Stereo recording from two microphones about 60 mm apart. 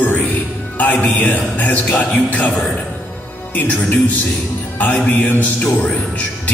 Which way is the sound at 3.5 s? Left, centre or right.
Left.